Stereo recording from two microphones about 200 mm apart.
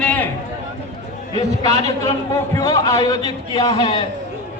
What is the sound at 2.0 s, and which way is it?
A man's voice, 15° left (ahead or behind).